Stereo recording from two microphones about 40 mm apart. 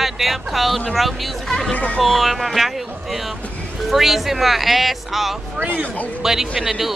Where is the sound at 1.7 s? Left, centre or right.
Left.